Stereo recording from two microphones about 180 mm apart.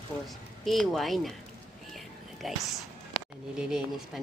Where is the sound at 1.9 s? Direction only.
Centre (ahead or behind).